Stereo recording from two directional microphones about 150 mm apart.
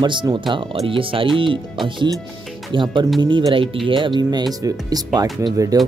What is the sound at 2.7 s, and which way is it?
Speech, 30° right (ahead or behind).